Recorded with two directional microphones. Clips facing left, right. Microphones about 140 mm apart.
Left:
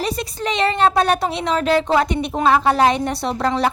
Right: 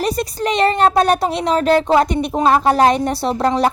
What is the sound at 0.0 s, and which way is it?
A woman's voice, 45° right (ahead or behind).